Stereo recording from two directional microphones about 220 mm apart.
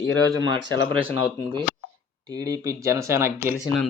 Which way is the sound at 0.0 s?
55° left (ahead or behind).